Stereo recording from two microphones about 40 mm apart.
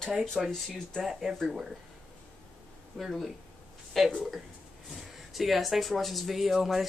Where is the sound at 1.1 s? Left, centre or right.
Centre.